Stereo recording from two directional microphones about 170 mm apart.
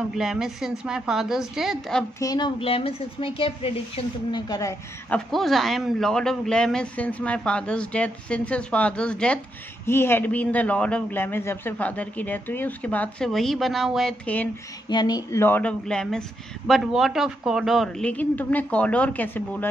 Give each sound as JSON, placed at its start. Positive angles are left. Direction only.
{"t": 0.1, "sound": "a man's voice", "side_deg": 0}
{"t": 2.1, "sound": "speech", "side_deg": 25}
{"t": 4.5, "sound": "speech", "side_deg": 20}
{"t": 5.1, "sound": "a man's voice", "side_deg": 0}
{"t": 14.9, "sound": "speech", "side_deg": 25}